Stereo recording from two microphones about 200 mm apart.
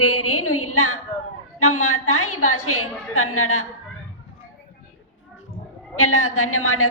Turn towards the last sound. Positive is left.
turn(degrees=90)